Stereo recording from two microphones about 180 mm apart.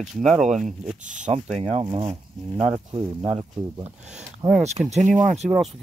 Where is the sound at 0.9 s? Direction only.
45° right (ahead or behind).